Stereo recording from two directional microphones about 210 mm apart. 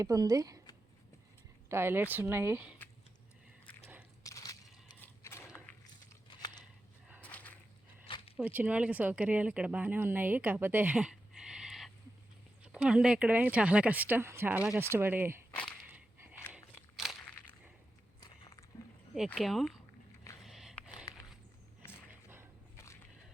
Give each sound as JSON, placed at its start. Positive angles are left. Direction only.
{"t": 0.0, "sound": "speech", "side_deg": -15}
{"t": 1.7, "sound": "speech", "side_deg": -10}
{"t": 4.2, "sound": "a sound", "side_deg": 15}
{"t": 7.2, "sound": "a sound", "side_deg": 5}
{"t": 8.0, "sound": "zipper", "side_deg": 25}
{"t": 8.4, "sound": "speech", "side_deg": -5}
{"t": 17.0, "sound": "crunch", "side_deg": 0}
{"t": 19.1, "sound": "speech", "side_deg": 0}
{"t": 20.4, "sound": "a sound", "side_deg": 0}